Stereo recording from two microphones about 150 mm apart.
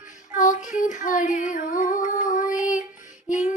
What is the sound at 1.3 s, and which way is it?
Music, 60° left (ahead or behind).